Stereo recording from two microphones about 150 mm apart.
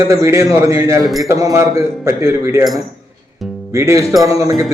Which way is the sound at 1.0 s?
Centre (ahead or behind).